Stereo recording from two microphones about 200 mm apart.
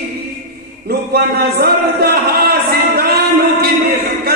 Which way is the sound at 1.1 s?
50° right (ahead or behind).